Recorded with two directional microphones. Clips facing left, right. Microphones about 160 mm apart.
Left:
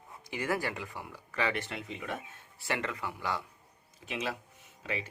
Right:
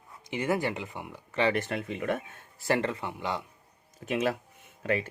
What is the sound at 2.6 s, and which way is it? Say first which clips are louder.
Speech: right 7 dB; 35° right (ahead or behind).